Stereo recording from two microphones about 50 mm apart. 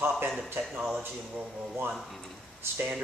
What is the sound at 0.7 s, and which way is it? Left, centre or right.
Speech, centre.